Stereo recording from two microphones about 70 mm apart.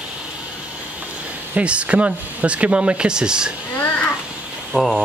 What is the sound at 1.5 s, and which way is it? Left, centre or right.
Speech, centre.